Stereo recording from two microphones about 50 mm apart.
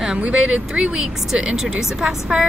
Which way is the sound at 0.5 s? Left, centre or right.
Right.